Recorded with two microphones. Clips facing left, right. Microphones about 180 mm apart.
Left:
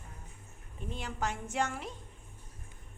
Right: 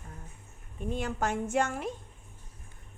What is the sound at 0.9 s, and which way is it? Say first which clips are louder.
Speech: right 6 dB; 50° right (ahead or behind).